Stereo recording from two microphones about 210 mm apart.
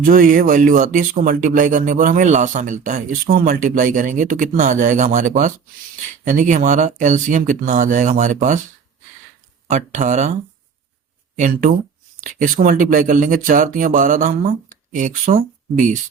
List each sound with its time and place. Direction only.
0.0 s speech: 40° right (ahead or behind)
9.6 s speech: 35° right (ahead or behind)
11.3 s speech: 40° right (ahead or behind)